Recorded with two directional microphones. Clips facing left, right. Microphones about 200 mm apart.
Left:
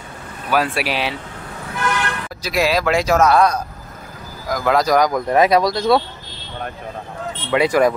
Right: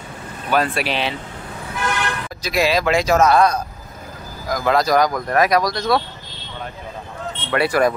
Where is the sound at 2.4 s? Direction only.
5° left (ahead or behind).